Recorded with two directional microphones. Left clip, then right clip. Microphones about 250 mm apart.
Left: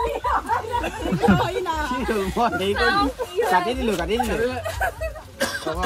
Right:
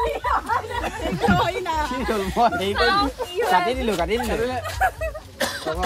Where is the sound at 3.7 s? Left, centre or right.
Right.